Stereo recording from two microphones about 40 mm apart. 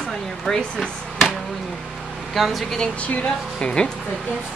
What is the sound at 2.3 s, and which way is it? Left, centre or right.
Speech, centre.